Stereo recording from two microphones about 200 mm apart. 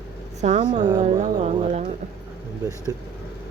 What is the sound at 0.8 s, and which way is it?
Speech, 20° right (ahead or behind).